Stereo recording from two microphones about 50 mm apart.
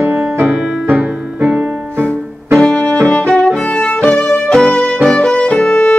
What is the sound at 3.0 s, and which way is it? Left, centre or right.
Violin, left.